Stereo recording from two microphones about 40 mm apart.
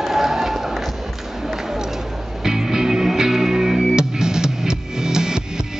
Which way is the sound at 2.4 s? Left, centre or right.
Centre.